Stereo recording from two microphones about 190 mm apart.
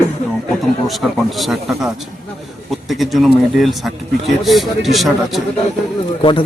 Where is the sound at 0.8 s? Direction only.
Centre (ahead or behind).